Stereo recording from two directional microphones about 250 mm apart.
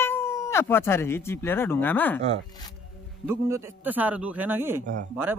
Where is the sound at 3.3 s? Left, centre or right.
Centre.